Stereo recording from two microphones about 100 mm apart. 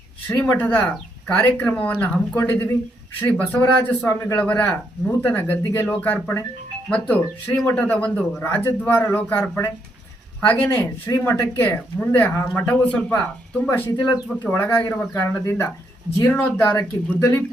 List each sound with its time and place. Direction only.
0.3 s speech: 20° left (ahead or behind)
8.4 s speech: 25° left (ahead or behind)
10.4 s speech: 15° left (ahead or behind)